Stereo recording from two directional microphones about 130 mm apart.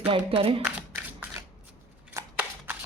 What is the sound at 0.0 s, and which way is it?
Speech, 45° right (ahead or behind).